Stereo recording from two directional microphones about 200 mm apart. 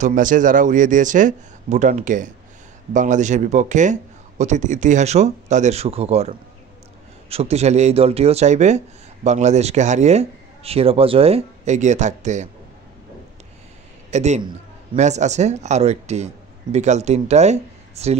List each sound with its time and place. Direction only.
0.0 s speech: 40° right (ahead or behind)
14.1 s speech: 35° right (ahead or behind)